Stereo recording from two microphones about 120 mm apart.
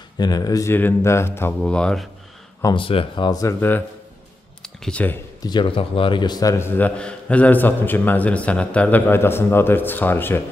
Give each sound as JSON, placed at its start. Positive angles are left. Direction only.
{"t": 0.2, "sound": "speech", "side_deg": 30}
{"t": 1.6, "sound": "a man's voice", "side_deg": 5}
{"t": 2.7, "sound": "speech", "side_deg": 50}
{"t": 3.3, "sound": "speech", "side_deg": 30}
{"t": 4.8, "sound": "a man's voice", "side_deg": 15}
{"t": 5.4, "sound": "speech", "side_deg": 40}
{"t": 7.0, "sound": "a man's voice", "side_deg": 10}